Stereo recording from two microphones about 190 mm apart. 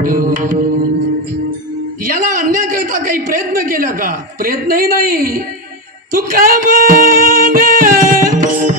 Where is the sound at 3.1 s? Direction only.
45° right (ahead or behind).